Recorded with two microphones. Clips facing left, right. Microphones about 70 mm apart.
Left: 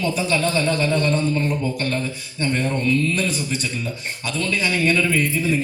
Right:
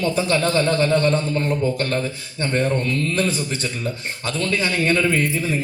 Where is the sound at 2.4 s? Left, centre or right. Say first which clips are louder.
Right 1 dB; right.